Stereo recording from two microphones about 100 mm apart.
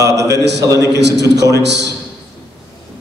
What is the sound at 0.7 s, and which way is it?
Speech, 35° left (ahead or behind).